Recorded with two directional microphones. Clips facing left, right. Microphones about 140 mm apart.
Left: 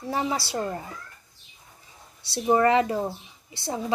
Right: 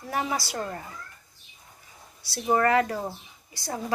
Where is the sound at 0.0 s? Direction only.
25° left (ahead or behind).